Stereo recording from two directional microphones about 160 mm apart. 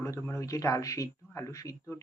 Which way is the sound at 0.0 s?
20° left (ahead or behind).